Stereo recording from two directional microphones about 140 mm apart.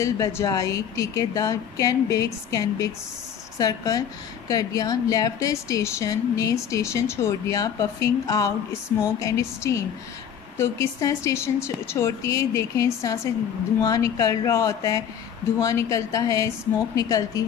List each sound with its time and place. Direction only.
0.0 s a woman's voice: 20° left (ahead or behind)